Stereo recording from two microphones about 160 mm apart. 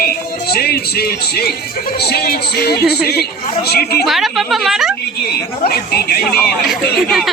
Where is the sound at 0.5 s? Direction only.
80° left.